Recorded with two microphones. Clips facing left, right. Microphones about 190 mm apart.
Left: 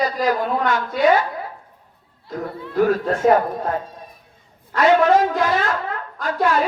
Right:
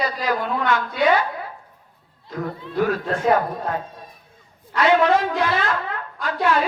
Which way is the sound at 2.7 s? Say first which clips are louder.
Left 4 dB; 45° left (ahead or behind).